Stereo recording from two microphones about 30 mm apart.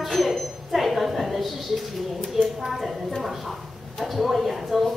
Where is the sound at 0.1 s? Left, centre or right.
Centre.